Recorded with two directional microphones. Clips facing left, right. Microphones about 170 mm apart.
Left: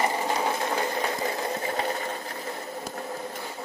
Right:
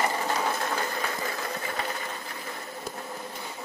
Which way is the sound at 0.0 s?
20° left (ahead or behind).